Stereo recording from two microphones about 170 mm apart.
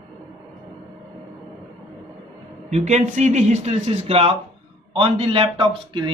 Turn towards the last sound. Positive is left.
turn(degrees=-30)  # may be behind; listen again after turning